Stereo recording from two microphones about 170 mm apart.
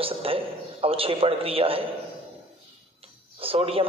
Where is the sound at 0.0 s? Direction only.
35° right (ahead or behind).